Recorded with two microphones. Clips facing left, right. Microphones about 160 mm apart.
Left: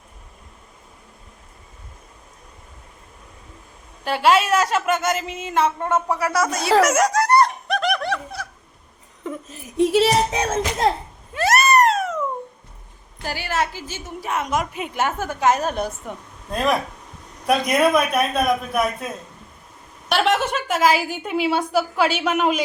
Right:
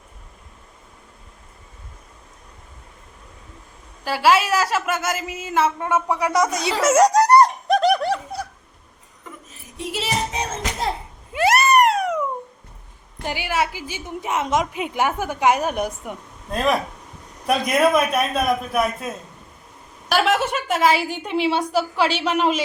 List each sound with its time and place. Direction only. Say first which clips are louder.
4.0 s a woman's voice: even; 5° right (ahead or behind); by 8.4 s 35° right (ahead or behind)
10.0 s music: left 7 dB; 80° left
11.3 s cat: right 1 dB; 15° right (ahead or behind)
13.2 s a woman's voice: right 1 dB; 15° right (ahead or behind)
16.5 s a woman's voice: even; centre (ahead or behind)
20.1 s a woman's voice: even; centre (ahead or behind)